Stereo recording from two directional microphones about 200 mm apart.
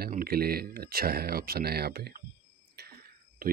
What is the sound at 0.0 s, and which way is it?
Speech, 50° right (ahead or behind).